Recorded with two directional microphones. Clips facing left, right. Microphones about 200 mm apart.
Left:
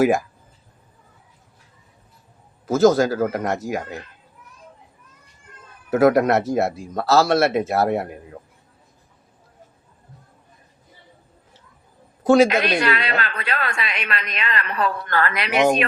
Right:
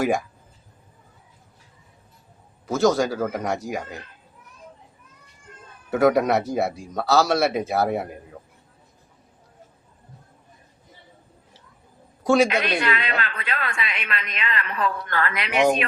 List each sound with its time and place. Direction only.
0.0 s speech: centre (ahead or behind)
2.6 s speech: centre (ahead or behind)
5.9 s speech: centre (ahead or behind)
12.2 s a man's voice: centre (ahead or behind)
12.6 s a woman's voice: 75° left (ahead or behind)
12.9 s speech: 40° left (ahead or behind)
13.4 s a woman's voice: 75° left (ahead or behind)
15.0 s speech: 40° left (ahead or behind)